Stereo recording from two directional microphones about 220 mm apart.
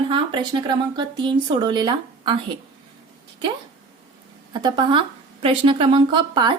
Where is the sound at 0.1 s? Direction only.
20° right (ahead or behind).